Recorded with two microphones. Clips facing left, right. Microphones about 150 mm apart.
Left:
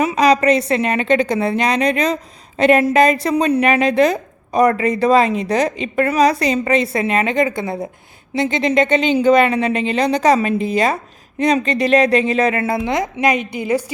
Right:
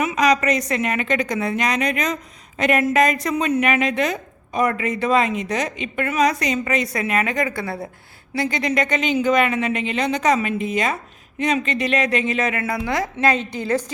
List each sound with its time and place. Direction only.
0.0 s a woman's voice: 30° left (ahead or behind); by 13.9 s 10° left (ahead or behind)